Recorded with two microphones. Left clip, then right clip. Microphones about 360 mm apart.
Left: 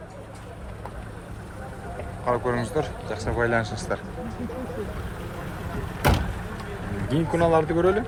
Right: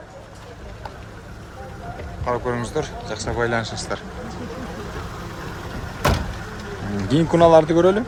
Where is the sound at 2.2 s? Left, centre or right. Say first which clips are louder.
Right 1 dB; centre.